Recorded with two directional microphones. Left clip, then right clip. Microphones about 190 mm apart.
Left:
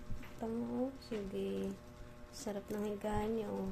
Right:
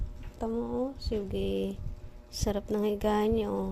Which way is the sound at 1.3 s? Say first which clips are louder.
Right 8 dB; 50° right (ahead or behind).